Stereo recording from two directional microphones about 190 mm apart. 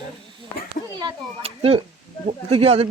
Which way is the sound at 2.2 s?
30° right (ahead or behind).